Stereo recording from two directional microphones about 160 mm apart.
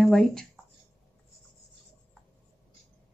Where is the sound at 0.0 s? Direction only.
Centre (ahead or behind).